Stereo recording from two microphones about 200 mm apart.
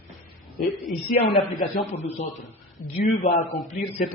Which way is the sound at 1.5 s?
35° left (ahead or behind).